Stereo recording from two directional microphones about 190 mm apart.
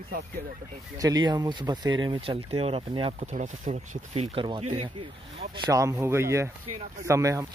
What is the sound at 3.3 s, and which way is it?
Speech, 40° right (ahead or behind).